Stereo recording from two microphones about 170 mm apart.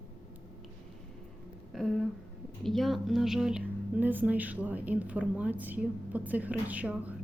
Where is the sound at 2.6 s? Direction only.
Centre (ahead or behind).